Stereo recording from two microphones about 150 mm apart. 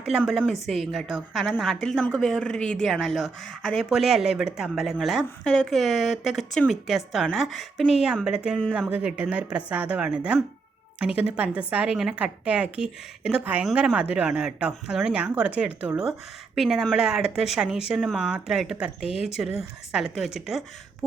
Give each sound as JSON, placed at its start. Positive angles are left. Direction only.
{"t": 0.0, "sound": "speech", "side_deg": -5}
{"t": 8.7, "sound": "speech", "side_deg": -5}
{"t": 19.0, "sound": "speech", "side_deg": 40}